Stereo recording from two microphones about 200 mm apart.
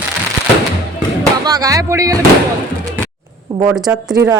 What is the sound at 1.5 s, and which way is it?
Speech, 20° right (ahead or behind).